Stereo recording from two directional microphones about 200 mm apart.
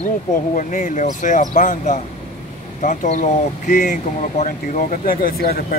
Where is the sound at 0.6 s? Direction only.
40° left (ahead or behind).